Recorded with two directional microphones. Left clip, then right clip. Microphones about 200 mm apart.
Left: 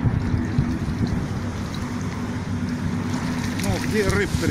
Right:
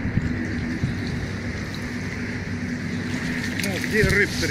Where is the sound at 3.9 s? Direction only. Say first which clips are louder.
Right 3 dB; 10° right (ahead or behind).